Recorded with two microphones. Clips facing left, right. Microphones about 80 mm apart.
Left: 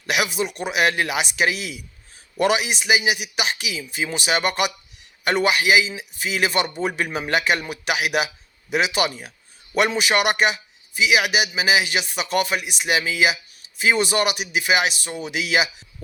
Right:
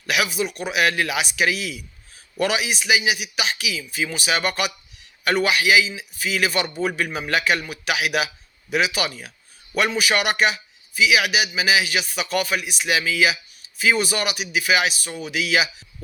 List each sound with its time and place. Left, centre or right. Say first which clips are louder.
0.0 s a man's voice: even; left